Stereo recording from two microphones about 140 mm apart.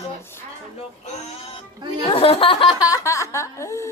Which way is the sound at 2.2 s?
40° left (ahead or behind).